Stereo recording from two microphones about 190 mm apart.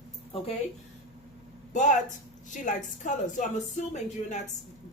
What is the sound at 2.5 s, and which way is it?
Speech, 40° left (ahead or behind).